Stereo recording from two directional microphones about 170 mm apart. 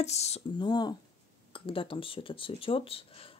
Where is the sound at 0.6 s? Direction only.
25° left (ahead or behind).